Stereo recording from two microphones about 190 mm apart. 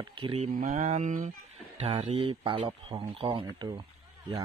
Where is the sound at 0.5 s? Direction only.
50° right (ahead or behind).